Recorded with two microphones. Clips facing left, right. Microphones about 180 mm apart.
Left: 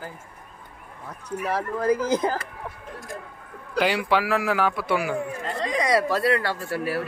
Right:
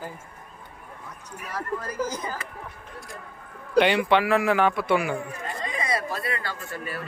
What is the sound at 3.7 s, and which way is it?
Speech, 5° left (ahead or behind).